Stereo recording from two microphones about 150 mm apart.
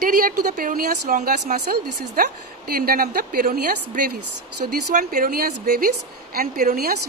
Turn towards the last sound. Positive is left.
turn(degrees=-70)  # may be behind; listen again after turning